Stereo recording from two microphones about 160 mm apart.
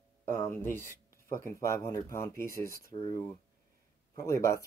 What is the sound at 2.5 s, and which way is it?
Speech, 65° left (ahead or behind).